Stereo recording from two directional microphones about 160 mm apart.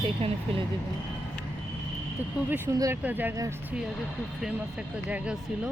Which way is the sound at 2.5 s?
20° right (ahead or behind).